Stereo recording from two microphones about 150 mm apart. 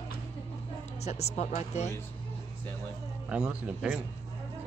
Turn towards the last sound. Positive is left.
turn(degrees=-5)  # may be behind; listen again after turning